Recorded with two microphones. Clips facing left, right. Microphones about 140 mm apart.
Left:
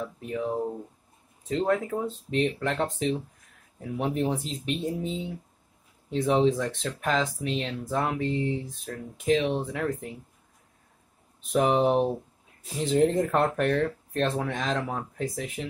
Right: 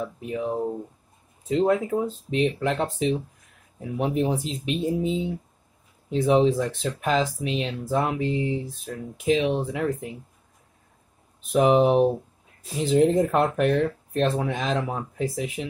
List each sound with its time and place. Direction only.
0.3 s speech: 5° right (ahead or behind)
11.5 s speech: 5° right (ahead or behind)